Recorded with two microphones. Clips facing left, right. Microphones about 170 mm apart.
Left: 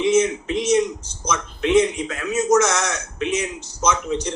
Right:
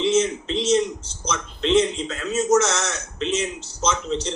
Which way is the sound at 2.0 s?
30° right (ahead or behind).